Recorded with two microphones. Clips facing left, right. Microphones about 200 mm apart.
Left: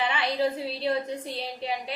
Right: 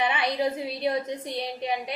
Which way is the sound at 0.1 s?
15° right (ahead or behind).